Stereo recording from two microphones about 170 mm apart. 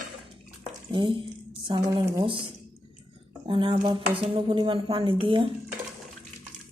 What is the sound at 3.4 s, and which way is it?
A woman's voice, 30° right (ahead or behind).